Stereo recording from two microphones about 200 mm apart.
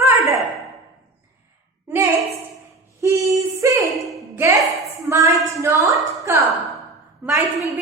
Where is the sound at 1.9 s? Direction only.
10° right (ahead or behind).